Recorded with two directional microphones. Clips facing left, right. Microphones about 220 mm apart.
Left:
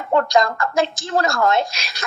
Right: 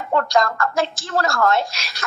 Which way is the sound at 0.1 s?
20° left (ahead or behind).